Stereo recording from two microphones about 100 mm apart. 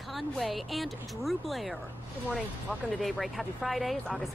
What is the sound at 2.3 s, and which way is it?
Speech, 15° right (ahead or behind).